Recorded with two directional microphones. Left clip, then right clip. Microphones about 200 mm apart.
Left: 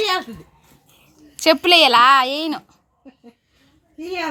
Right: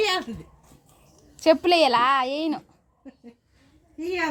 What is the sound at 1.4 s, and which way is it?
Speech, centre (ahead or behind).